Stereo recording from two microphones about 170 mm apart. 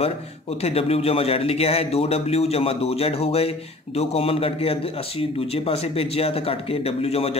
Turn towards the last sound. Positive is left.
turn(degrees=35)  # may be behind; listen again after turning